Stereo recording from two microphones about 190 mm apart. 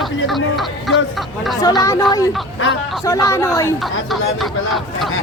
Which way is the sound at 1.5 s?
20° left (ahead or behind).